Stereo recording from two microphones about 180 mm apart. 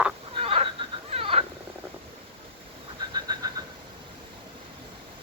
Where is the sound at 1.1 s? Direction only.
35° right (ahead or behind).